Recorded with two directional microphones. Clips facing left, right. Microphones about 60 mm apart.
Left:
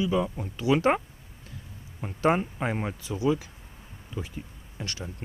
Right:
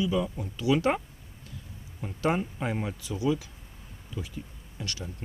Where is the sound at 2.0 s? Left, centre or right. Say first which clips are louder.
Left 3 dB; left.